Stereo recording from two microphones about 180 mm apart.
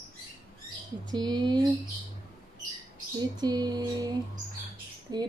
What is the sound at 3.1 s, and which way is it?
Speech, 25° right (ahead or behind).